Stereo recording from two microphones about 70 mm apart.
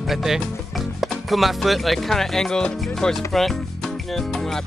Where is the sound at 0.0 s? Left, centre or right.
Centre.